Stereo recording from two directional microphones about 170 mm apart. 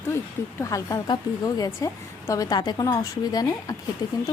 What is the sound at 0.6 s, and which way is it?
A woman's voice, 20° left (ahead or behind).